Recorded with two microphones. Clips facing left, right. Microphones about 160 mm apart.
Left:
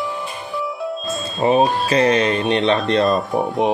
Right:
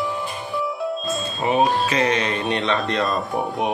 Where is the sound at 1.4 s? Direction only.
40° left (ahead or behind).